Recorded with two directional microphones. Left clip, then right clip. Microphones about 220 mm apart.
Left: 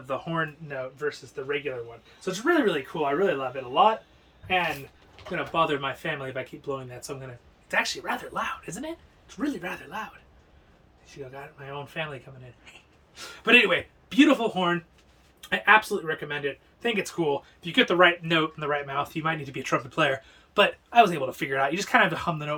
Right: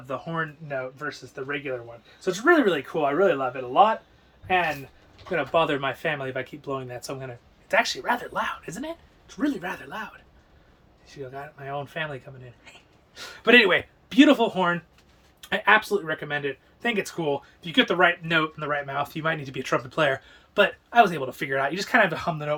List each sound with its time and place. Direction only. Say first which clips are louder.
0.1 s speech: left 1 dB; 5° left (ahead or behind)
0.9 s speech: left 2 dB; 10° right (ahead or behind)
5.3 s speech: right 3 dB; 15° right (ahead or behind)
11.1 s speech: right 3 dB; centre (ahead or behind)
13.1 s speech: right 2 dB; 10° right (ahead or behind)